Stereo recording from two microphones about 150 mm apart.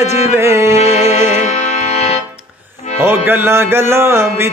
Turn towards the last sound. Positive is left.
turn(degrees=-15)  # may be behind; listen again after turning